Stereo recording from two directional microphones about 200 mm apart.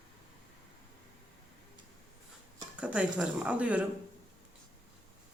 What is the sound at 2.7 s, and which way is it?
Speech, 5° right (ahead or behind).